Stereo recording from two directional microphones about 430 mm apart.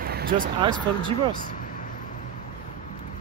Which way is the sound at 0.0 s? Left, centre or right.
Centre.